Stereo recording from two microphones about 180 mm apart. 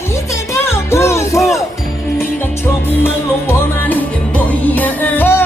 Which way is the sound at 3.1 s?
10° left (ahead or behind).